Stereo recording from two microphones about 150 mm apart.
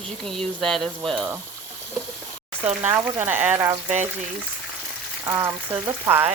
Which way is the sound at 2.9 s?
15° right (ahead or behind).